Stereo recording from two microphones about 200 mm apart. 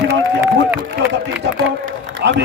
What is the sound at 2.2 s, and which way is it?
Speech, 55° right (ahead or behind).